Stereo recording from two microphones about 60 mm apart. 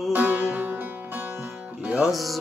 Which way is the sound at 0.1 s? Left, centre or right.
Right.